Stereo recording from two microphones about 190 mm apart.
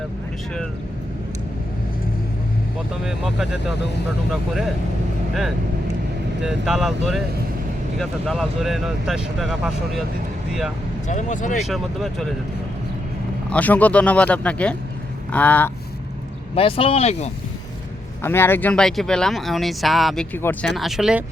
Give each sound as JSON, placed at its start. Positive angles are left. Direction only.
{"t": 3.0, "sound": "speech", "side_deg": 0}
{"t": 6.4, "sound": "speech", "side_deg": -5}
{"t": 11.1, "sound": "speech", "side_deg": 40}
{"t": 11.6, "sound": "speech", "side_deg": 0}
{"t": 13.5, "sound": "speech", "side_deg": 10}
{"t": 16.6, "sound": "speech", "side_deg": 30}
{"t": 18.2, "sound": "speech", "side_deg": 10}
{"t": 20.7, "sound": "speech", "side_deg": 0}